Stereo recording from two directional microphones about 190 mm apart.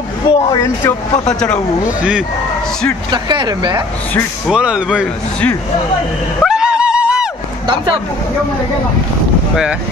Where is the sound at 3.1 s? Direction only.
25° right (ahead or behind).